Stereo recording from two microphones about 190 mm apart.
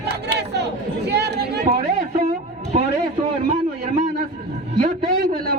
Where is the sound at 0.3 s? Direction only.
60° right (ahead or behind).